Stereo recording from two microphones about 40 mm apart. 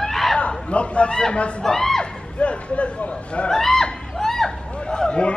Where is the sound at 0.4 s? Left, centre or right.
Left.